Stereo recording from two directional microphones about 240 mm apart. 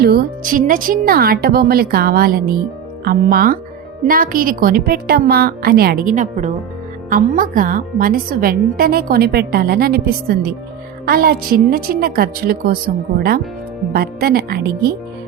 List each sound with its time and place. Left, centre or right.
0.0 s a woman's voice: right